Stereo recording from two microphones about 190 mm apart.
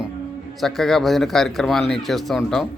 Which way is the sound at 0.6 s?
Centre (ahead or behind).